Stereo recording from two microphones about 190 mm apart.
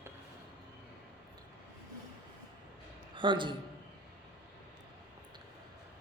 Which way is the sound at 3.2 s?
25° right (ahead or behind).